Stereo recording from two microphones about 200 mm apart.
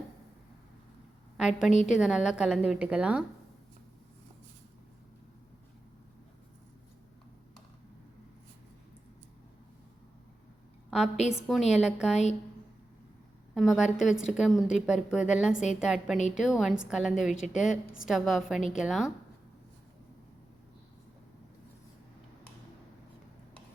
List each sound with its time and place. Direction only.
1.4 s a woman's voice: 5° right (ahead or behind)
1.7 s a woman's voice: 35° left (ahead or behind)
2.0 s a woman's voice: centre (ahead or behind)
11.3 s a woman's voice: centre (ahead or behind)
12.1 s a woman's voice: 35° left (ahead or behind)
13.5 s a woman's voice: centre (ahead or behind)
16.1 s a woman's voice: 35° left (ahead or behind)
16.6 s a woman's voice: 5° right (ahead or behind)